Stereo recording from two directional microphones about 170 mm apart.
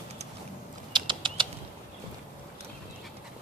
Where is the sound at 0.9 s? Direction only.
30° right (ahead or behind).